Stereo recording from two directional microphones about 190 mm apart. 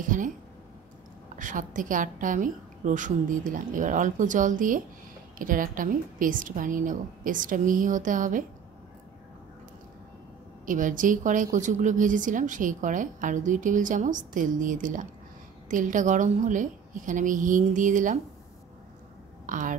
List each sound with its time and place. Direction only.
0.0 s a sound: 45° right (ahead or behind)
1.3 s a woman's voice: 45° right (ahead or behind)
10.6 s a woman's voice: 45° right (ahead or behind)
19.4 s speech: 45° right (ahead or behind)